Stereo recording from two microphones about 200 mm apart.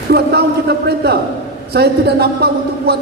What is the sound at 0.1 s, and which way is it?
A man's voice, 55° right (ahead or behind).